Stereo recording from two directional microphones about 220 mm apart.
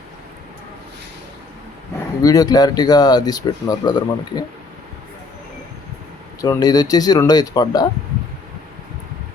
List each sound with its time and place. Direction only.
2.2 s speech: 15° left (ahead or behind)
6.4 s speech: 15° left (ahead or behind)